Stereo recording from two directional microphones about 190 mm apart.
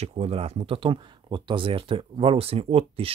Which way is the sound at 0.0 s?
30° right (ahead or behind).